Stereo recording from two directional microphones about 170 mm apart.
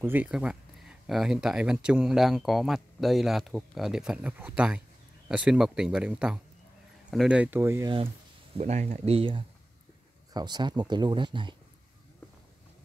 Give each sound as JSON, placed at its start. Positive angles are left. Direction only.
{"t": 0.0, "sound": "speech", "side_deg": -10}
{"t": 8.5, "sound": "speech", "side_deg": -40}